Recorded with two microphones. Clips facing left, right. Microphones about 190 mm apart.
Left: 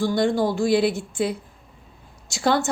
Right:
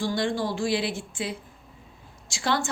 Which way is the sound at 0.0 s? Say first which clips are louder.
Left 6 dB; 40° left (ahead or behind).